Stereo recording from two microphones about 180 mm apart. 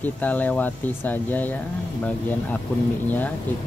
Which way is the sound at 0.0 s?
10° left (ahead or behind).